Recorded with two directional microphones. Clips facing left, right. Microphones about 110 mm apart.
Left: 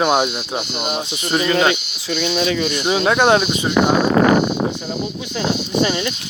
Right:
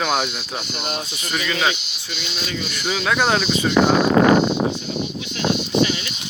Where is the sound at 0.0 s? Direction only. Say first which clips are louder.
Left 5 dB; 20° left (ahead or behind).